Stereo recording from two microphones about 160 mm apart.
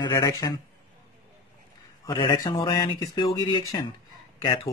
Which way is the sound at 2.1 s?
25° left (ahead or behind).